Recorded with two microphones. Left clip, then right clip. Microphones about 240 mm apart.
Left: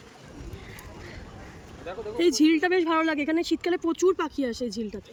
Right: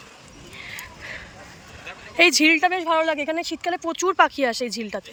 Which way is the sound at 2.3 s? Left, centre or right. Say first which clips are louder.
Right 4 dB; centre.